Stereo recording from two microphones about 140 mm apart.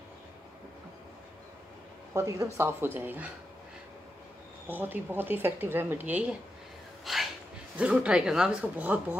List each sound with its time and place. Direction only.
2.1 s a woman's voice: 20° right (ahead or behind)
4.6 s a woman's voice: 15° right (ahead or behind)